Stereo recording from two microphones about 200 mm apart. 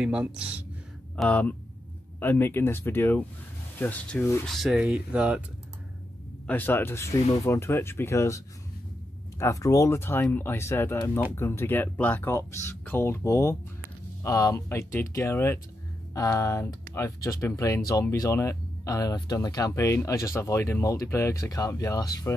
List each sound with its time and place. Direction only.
0.0 s speech: 5° right (ahead or behind)
1.1 s speech: 5° left (ahead or behind)
4.5 s speech: centre (ahead or behind)
6.4 s speech: 10° left (ahead or behind)
9.4 s speech: 15° left (ahead or behind)